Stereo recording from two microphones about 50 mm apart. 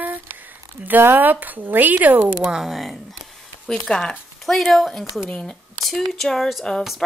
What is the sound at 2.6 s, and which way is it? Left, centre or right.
Speech, centre.